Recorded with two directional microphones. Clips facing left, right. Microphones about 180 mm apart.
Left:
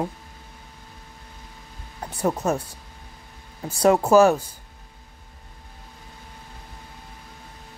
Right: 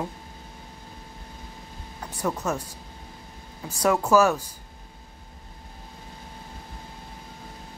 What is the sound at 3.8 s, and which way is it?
Speech, 30° left (ahead or behind).